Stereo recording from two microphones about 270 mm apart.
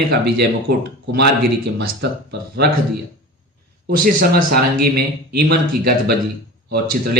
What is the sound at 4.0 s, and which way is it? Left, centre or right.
A man's voice, right.